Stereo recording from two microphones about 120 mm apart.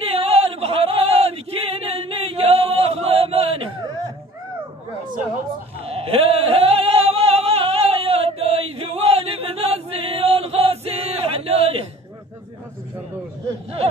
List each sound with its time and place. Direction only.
0.1 s male singing: 55° right (ahead or behind)
5.9 s singing: 55° right (ahead or behind)